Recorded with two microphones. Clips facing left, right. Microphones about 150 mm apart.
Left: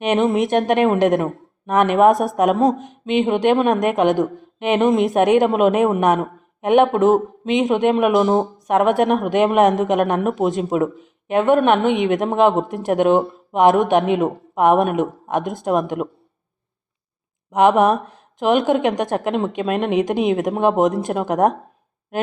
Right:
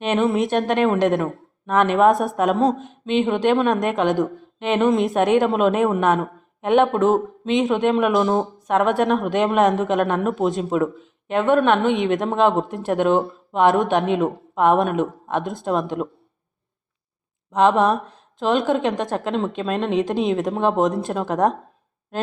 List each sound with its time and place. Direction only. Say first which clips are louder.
0.0 s a woman's voice: left 2 dB; 15° left (ahead or behind)
10.2 s a woman's voice: left 2 dB; 5° left (ahead or behind)
17.5 s a woman's voice: left 2 dB; 15° left (ahead or behind)